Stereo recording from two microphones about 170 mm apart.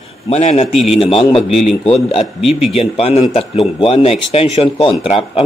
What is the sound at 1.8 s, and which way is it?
A man's voice, 35° left (ahead or behind).